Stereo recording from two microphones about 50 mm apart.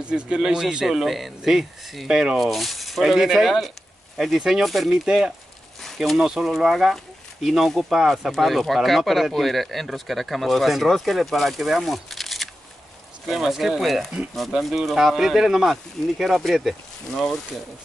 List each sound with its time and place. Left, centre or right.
0.0 s speech: right
0.8 s speech: centre
2.3 s speech: centre
5.0 s speech: centre